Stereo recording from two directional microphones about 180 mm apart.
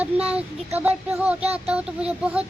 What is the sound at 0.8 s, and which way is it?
Speech, 10° right (ahead or behind).